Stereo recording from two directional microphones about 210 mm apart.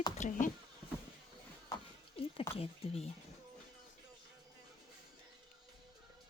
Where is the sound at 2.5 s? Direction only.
25° left (ahead or behind).